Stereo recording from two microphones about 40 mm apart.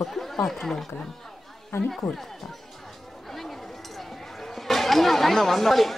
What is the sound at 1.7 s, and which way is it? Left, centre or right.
Speech, left.